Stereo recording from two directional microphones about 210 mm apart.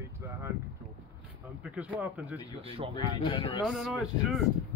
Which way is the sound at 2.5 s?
25° right (ahead or behind).